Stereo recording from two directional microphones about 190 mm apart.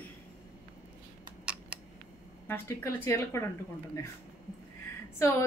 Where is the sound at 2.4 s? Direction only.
15° left (ahead or behind).